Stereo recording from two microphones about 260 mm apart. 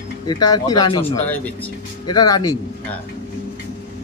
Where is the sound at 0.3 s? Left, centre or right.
Centre.